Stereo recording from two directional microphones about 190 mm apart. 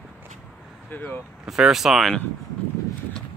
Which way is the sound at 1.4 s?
5° right (ahead or behind).